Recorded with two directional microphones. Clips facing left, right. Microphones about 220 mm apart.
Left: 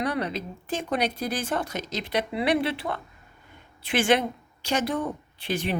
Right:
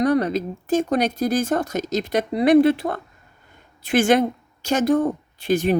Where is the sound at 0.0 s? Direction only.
45° right (ahead or behind).